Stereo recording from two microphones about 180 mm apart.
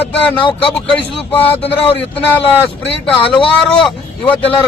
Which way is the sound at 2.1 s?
10° left (ahead or behind).